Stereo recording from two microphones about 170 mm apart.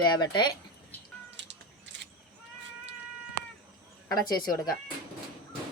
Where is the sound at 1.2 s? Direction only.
90° right.